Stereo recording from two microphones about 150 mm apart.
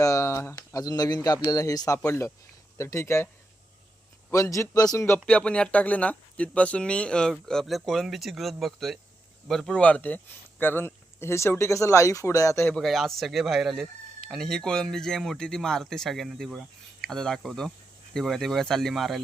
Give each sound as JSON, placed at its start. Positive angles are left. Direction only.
{"t": 0.0, "sound": "a man's voice", "side_deg": 20}
{"t": 4.3, "sound": "a man's voice", "side_deg": 20}
{"t": 12.7, "sound": "speech", "side_deg": 0}